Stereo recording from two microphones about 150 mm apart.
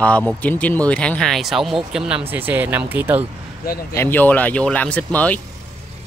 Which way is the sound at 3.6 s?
90° left.